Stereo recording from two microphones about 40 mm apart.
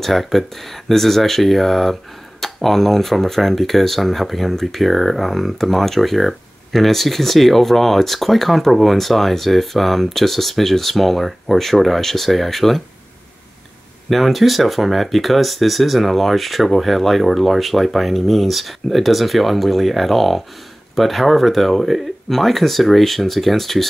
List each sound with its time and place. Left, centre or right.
0.0 s speech: centre
14.0 s speech: centre